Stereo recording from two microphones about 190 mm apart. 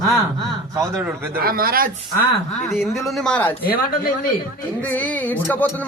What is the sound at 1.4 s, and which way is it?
Speech, 50° right (ahead or behind).